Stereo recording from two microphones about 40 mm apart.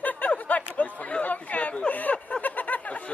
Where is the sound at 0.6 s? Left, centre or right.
Left.